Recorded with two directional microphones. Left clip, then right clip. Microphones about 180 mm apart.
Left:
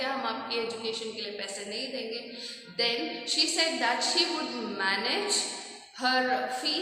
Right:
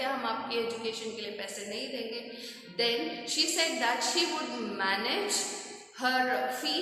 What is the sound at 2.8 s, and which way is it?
A woman's voice, 10° right (ahead or behind).